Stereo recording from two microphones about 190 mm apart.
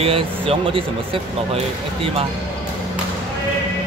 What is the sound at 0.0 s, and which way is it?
Speech, 30° right (ahead or behind).